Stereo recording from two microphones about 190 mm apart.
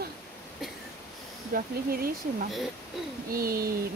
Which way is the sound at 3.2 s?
50° right (ahead or behind).